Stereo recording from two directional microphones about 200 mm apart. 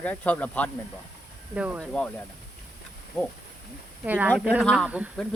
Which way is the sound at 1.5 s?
5° right (ahead or behind).